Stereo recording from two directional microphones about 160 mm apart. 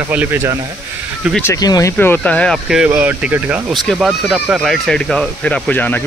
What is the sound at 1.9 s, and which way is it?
Speech, 10° left (ahead or behind).